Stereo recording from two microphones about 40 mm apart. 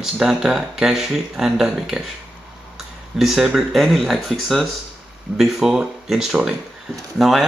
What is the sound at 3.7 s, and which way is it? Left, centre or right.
Speech, centre.